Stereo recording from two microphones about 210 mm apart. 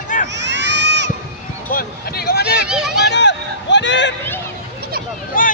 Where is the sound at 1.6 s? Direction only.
45° left (ahead or behind).